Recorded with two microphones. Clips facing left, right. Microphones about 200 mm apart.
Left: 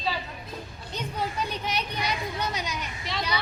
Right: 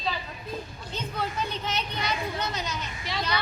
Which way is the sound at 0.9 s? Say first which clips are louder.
Left 1 dB; 10° left (ahead or behind).